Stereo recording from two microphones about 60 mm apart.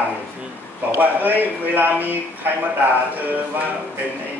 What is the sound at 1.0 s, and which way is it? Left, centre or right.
Speech, right.